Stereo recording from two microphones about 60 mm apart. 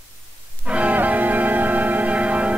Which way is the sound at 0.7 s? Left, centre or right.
Right.